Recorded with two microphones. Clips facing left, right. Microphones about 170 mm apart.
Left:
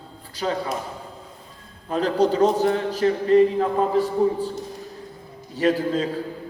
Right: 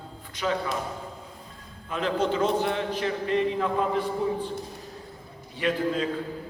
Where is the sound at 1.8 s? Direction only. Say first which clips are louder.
Left 6 dB; 35° left (ahead or behind).